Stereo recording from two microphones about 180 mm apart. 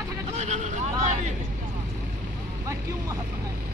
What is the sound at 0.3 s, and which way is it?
Vehicle, 40° right (ahead or behind).